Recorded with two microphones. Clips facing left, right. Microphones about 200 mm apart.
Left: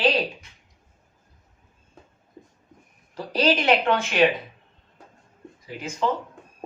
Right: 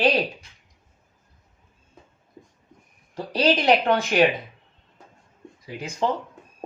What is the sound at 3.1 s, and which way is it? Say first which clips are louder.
Speech: right 1 dB; 35° right (ahead or behind).